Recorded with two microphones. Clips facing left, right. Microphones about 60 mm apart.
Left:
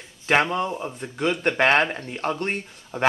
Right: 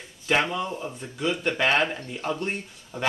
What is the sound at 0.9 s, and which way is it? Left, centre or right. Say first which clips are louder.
Speech: left 3 dB; left.